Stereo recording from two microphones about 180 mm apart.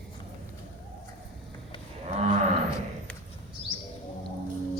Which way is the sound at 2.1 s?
40° right (ahead or behind).